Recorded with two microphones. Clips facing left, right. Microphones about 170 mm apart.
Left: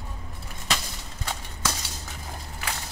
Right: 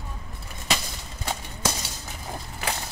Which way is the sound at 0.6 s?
10° right (ahead or behind).